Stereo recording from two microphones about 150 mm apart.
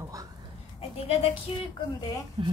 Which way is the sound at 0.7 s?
40° left (ahead or behind).